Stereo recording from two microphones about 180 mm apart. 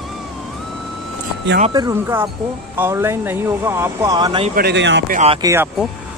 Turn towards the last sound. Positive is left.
turn(degrees=-15)  # may be behind; listen again after turning